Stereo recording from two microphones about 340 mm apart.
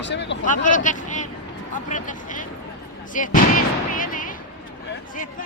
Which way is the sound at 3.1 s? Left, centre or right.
Left.